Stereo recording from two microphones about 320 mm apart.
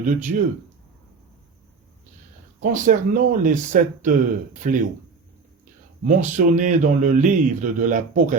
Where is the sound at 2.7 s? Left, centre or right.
Right.